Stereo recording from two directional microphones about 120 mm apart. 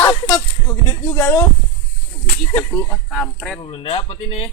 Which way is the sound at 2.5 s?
20° left (ahead or behind).